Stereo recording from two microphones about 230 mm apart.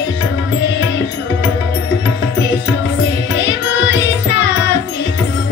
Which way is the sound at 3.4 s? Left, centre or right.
Left.